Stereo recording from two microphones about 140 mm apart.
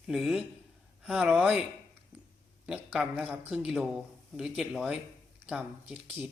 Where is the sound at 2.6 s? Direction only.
5° right (ahead or behind).